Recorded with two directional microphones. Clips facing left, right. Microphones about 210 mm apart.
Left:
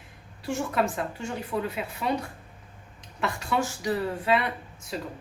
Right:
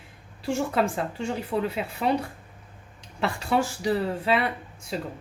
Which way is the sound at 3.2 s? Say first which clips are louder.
Right 3 dB; 30° right (ahead or behind).